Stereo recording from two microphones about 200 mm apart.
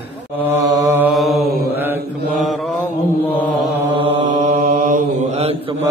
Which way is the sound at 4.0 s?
35° right (ahead or behind).